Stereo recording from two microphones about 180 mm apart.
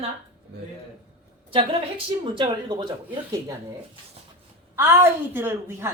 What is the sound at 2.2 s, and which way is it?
Speech, 30° right (ahead or behind).